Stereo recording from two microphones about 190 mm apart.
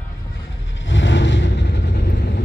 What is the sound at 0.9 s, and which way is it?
Vehicle, 75° left (ahead or behind).